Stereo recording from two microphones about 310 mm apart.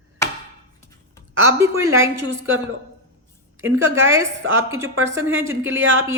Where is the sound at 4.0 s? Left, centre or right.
Centre.